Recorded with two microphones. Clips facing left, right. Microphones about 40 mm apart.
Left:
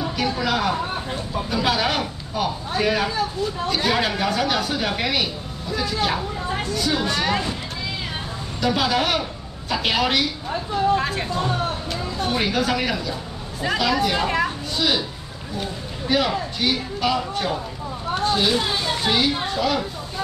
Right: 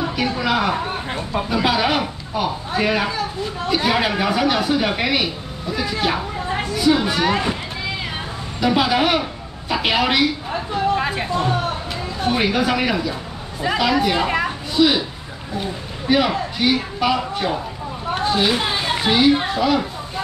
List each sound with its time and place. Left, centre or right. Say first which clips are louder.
0.0 s speech: right 2 dB; centre
8.5 s a woman's voice: right 3 dB; centre
18.2 s a sound: right 2 dB; centre
18.5 s children playing: right 2 dB; right
19.0 s speech: right 7 dB; centre